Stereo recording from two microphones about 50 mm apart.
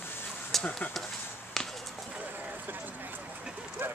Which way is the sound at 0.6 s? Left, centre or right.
Left.